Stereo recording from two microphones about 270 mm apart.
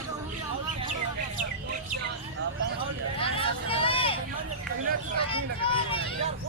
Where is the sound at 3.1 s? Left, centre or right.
Centre.